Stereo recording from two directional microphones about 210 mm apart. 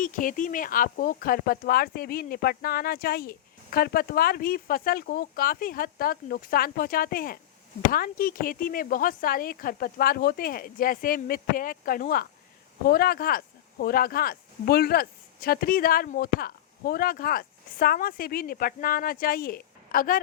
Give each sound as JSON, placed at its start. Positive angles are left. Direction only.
{"t": 0.0, "sound": "speech", "side_deg": 40}